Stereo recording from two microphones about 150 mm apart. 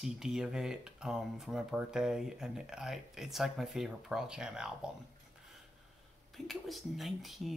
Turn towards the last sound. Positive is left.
turn(degrees=0)  # may be behind; listen again after turning